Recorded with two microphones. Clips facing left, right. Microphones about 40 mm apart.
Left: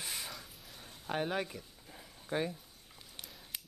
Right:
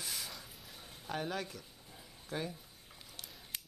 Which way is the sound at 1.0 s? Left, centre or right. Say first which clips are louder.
Left 4 dB; left.